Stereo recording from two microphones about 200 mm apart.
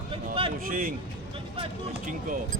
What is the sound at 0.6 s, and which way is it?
Speech, 45° right (ahead or behind).